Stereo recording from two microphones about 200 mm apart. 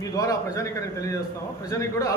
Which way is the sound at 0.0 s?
15° left (ahead or behind).